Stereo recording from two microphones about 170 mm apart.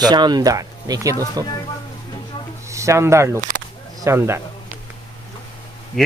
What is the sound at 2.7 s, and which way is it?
Speech, 15° right (ahead or behind).